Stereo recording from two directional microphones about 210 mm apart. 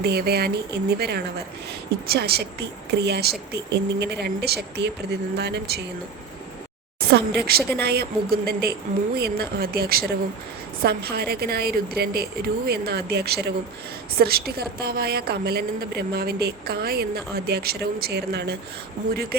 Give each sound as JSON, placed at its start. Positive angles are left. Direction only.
{"t": 0.0, "sound": "a woman's voice", "side_deg": -50}
{"t": 7.1, "sound": "a woman's voice", "side_deg": -50}